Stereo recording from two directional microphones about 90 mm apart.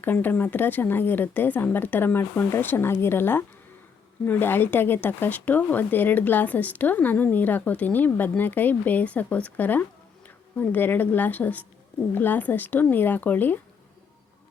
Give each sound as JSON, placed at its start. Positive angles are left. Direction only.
{"t": 0.0, "sound": "speech", "side_deg": 20}